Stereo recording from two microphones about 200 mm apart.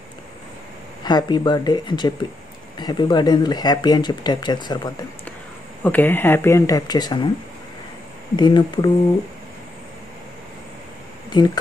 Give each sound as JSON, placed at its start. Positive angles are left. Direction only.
{"t": 1.0, "sound": "speech", "side_deg": 20}
{"t": 5.9, "sound": "speech", "side_deg": 10}
{"t": 8.4, "sound": "speech", "side_deg": 20}
{"t": 11.3, "sound": "speech", "side_deg": 20}